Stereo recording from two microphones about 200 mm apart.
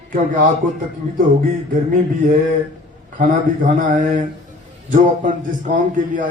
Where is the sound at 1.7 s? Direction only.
40° right (ahead or behind).